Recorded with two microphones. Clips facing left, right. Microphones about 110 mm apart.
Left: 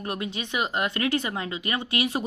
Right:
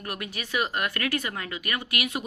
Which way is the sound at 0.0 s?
25° left (ahead or behind).